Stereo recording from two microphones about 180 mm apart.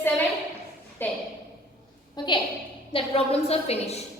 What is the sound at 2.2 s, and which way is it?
A woman's voice, 25° left (ahead or behind).